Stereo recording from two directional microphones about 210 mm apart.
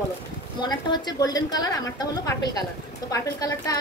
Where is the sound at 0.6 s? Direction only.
20° left (ahead or behind).